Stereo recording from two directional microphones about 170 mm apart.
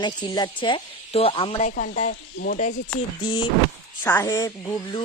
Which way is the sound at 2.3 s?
65° left (ahead or behind).